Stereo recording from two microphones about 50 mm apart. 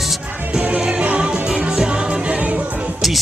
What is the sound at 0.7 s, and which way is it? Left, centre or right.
Music, right.